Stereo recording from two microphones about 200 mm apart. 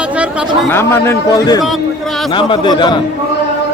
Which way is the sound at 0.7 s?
10° left (ahead or behind).